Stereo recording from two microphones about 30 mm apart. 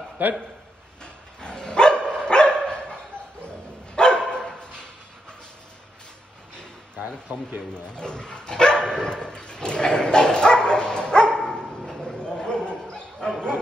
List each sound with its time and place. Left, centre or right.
0.2 s a man's voice: right
1.0 s dog: left
4.5 s a sound: left
7.3 s a man's voice: right
7.7 s speech: left
11.8 s bow-wow: left
12.2 s dog: left